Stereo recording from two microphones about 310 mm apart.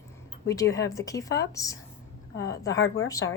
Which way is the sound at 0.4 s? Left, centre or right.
Centre.